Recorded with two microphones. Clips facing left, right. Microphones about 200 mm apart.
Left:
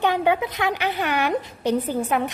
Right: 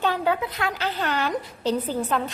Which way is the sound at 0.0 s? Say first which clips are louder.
Left 3 dB; 15° left (ahead or behind).